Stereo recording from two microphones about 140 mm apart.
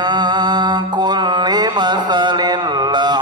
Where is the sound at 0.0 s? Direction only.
30° right (ahead or behind).